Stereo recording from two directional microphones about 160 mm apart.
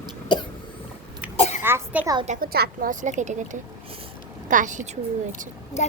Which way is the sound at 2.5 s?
80° right.